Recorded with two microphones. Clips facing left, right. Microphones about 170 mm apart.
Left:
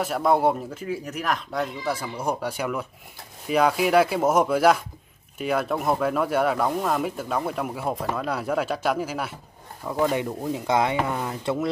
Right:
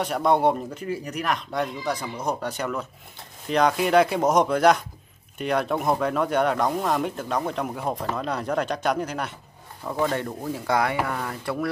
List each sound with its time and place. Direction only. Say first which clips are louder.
0.0 s speech: even; centre (ahead or behind)
10.1 s speech: left 2 dB; 10° left (ahead or behind)